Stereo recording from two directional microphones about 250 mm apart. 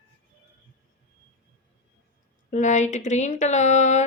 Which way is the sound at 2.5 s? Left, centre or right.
Left.